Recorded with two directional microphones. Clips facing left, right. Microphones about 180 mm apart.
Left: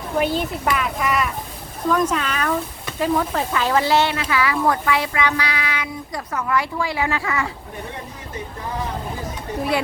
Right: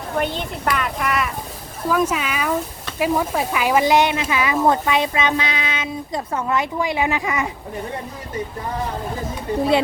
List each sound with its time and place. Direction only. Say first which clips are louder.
0.2 s speech: left 3 dB; 5° left (ahead or behind); by 7.5 s 20° right (ahead or behind)